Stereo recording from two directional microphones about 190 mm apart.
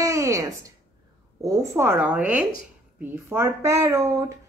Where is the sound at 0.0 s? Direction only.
15° right (ahead or behind).